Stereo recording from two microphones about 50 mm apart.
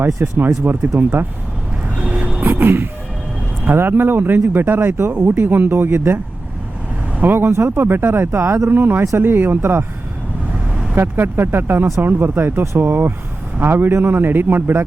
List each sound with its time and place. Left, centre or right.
0.3 s speech: right
2.0 s vehicle: right
2.4 s music: right
3.8 s speech: right
7.2 s speech: right
10.9 s speech: right